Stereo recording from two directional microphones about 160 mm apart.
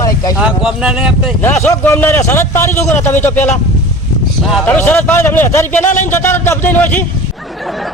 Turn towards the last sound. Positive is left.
turn(degrees=0)  # may be behind; listen again after turning